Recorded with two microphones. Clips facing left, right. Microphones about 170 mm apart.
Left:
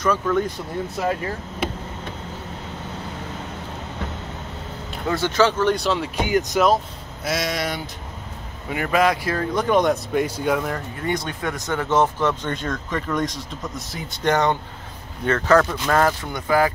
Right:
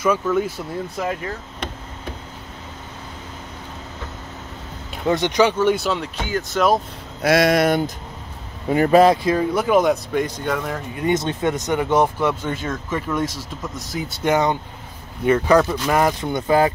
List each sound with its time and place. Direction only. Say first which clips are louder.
0.0 s speech: right 1 dB; 10° right (ahead or behind)
1.6 s a sound: left 5 dB; 5° left (ahead or behind)
5.1 s speech: right 2 dB; 15° right (ahead or behind); by 6.0 s centre (ahead or behind)
6.1 s speech: left 4 dB; 15° left (ahead or behind)
7.2 s speech: right 9 dB; 60° right (ahead or behind)
8.6 s speech: right 7 dB; 35° right (ahead or behind); by 10.2 s 5° right (ahead or behind)
10.2 s speech: left 2 dB; 10° left (ahead or behind)
11.0 s speech: right 8 dB; 20° right (ahead or behind)